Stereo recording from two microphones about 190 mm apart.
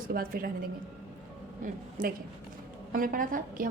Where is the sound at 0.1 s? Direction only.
50° right (ahead or behind).